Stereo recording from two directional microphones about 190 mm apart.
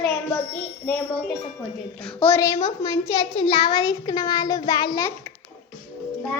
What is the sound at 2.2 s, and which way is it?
A child's voice, 10° left (ahead or behind).